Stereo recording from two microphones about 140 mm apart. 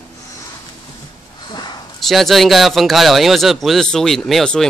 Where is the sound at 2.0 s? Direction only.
Centre (ahead or behind).